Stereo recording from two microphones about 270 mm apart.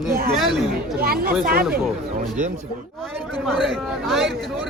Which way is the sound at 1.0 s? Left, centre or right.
Right.